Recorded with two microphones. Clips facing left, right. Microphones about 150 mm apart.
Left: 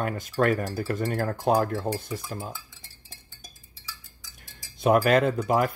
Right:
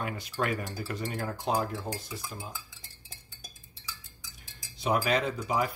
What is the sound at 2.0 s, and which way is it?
Stir, 55° left (ahead or behind).